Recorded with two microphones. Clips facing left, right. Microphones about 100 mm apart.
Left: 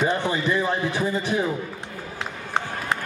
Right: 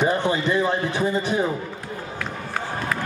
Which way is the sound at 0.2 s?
20° right (ahead or behind).